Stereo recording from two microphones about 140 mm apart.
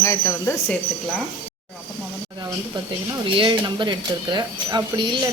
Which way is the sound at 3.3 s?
35° right (ahead or behind).